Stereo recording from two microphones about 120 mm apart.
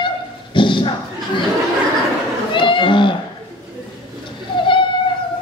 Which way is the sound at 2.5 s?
45° left (ahead or behind).